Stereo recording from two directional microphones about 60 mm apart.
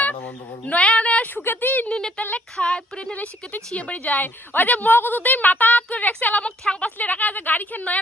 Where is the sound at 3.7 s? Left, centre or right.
Left.